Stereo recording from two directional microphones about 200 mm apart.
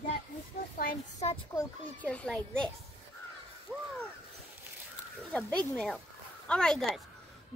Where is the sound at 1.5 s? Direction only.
15° left (ahead or behind).